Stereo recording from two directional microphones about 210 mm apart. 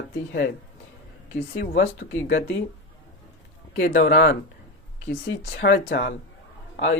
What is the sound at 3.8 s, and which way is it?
Speech, 45° left (ahead or behind).